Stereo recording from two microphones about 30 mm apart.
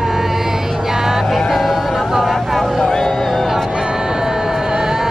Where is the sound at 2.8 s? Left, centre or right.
Centre.